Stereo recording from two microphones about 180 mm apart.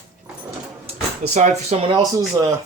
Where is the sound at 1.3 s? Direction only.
40° right (ahead or behind).